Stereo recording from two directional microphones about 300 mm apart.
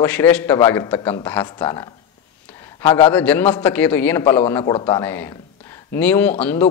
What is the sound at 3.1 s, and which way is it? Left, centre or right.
A man's voice, centre.